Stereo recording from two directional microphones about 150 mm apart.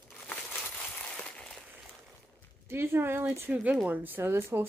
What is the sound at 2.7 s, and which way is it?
Speech, 15° right (ahead or behind).